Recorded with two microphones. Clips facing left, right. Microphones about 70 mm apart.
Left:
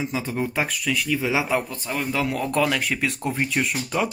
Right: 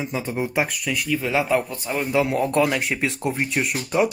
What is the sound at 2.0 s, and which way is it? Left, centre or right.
Speech, centre.